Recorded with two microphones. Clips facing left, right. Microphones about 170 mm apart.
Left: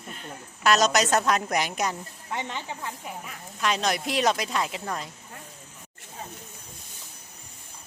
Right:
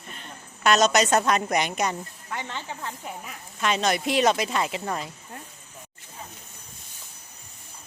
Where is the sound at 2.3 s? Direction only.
20° left (ahead or behind).